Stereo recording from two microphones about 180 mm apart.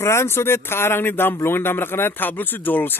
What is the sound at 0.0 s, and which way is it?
Speech, 15° left (ahead or behind).